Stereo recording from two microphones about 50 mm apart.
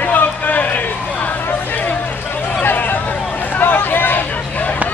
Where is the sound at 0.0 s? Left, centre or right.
Left.